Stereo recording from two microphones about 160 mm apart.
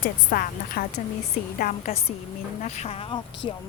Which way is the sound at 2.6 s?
45° left (ahead or behind).